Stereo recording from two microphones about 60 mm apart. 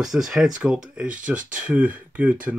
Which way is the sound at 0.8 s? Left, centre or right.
Right.